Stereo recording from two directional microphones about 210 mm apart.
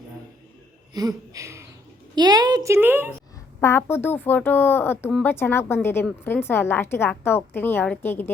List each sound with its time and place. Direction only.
0.9 s a woman's voice: 15° right (ahead or behind)
3.6 s speech: 10° left (ahead or behind)